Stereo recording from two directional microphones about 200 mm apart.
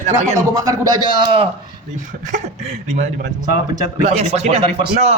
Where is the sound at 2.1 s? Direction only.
40° right (ahead or behind).